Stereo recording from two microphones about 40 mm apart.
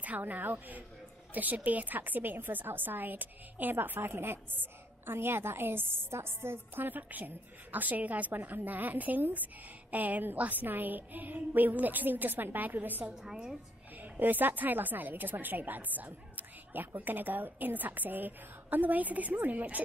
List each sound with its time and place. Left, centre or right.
0.0 s a woman's voice: right
4.0 s a woman's voice: right
6.8 s speech: right
13.1 s a woman's voice: centre
14.2 s speech: right